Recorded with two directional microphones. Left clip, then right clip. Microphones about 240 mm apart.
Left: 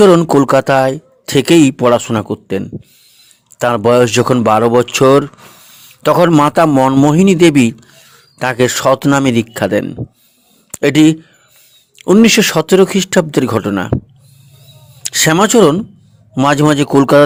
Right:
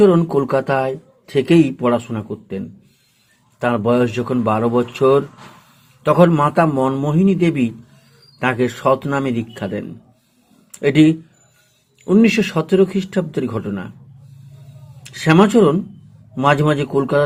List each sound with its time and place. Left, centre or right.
0.0 s speech: left
15.0 s speech: left